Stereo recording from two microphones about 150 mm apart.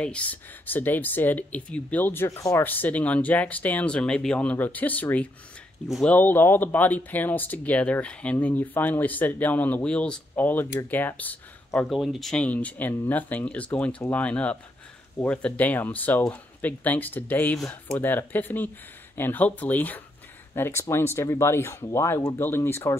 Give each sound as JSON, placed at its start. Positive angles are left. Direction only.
{"t": 0.0, "sound": "speech", "side_deg": 10}
{"t": 6.1, "sound": "speech", "side_deg": 15}
{"t": 11.9, "sound": "speech", "side_deg": 0}